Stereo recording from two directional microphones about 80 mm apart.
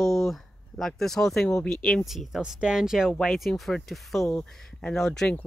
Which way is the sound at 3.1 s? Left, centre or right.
Centre.